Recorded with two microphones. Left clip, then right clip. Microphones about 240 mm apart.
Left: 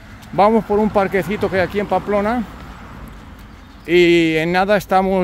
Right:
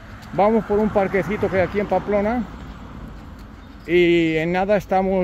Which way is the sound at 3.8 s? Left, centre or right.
Left.